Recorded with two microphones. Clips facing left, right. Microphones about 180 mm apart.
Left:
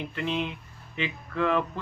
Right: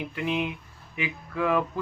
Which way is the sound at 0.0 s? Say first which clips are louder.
Right 1 dB; 10° right (ahead or behind).